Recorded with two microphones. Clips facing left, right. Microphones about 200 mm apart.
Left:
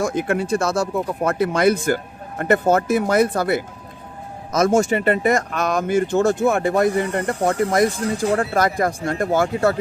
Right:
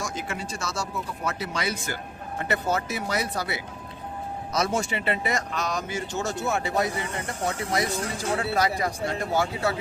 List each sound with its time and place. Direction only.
0.0 s speech: 55° left (ahead or behind)